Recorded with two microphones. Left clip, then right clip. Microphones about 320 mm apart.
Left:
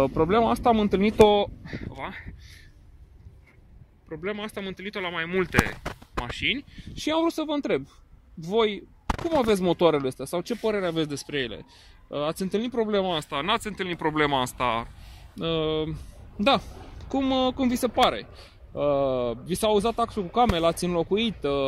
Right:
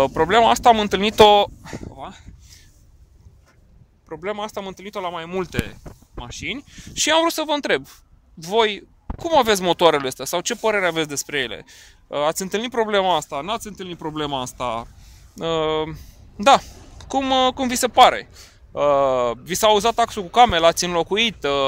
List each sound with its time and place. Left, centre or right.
0.0 s speech: right
2.0 s a sound: centre
4.1 s speech: centre
15.3 s speech: right